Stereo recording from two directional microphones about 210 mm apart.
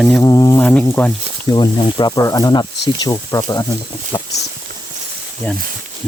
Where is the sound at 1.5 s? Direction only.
20° left (ahead or behind).